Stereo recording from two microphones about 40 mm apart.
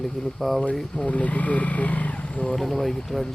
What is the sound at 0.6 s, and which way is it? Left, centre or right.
Speech, left.